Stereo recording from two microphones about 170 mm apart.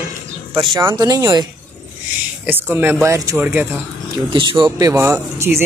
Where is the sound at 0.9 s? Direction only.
25° right (ahead or behind).